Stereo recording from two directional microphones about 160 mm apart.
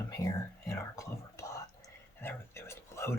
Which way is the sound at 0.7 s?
20° left (ahead or behind).